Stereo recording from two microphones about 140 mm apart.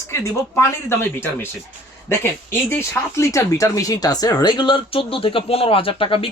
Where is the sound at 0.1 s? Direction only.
20° left (ahead or behind).